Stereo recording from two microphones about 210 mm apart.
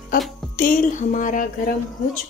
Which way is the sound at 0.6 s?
40° left (ahead or behind).